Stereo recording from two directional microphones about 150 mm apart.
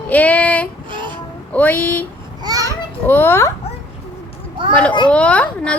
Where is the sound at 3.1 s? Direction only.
15° left (ahead or behind).